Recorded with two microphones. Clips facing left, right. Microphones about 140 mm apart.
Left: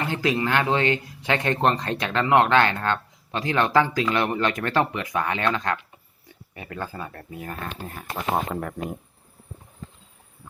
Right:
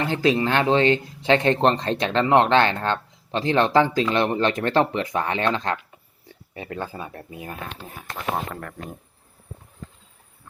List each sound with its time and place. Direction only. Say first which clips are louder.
0.1 s speech: right 3 dB; 25° right (ahead or behind)
8.4 s speech: left 5 dB; 20° left (ahead or behind)